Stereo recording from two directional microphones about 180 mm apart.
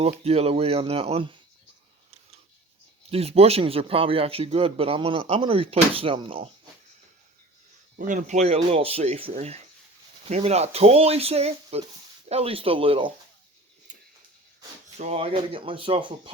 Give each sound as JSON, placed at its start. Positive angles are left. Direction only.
{"t": 0.0, "sound": "speech", "side_deg": -35}
{"t": 3.1, "sound": "speech", "side_deg": -35}
{"t": 7.9, "sound": "speech", "side_deg": -45}
{"t": 14.9, "sound": "speech", "side_deg": -35}